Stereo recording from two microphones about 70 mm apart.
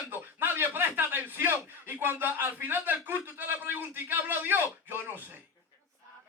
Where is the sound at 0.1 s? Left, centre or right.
Right.